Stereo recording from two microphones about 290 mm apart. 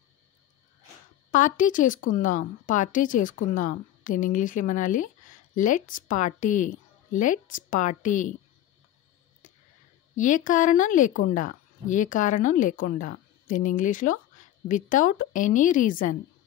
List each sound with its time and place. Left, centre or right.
1.3 s a woman's voice: left
10.1 s a woman's voice: left